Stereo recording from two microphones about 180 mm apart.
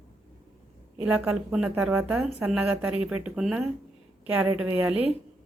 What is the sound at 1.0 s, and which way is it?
A woman's voice, 10° right (ahead or behind).